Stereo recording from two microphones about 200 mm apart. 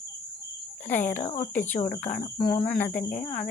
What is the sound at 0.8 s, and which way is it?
Speech, 10° left (ahead or behind).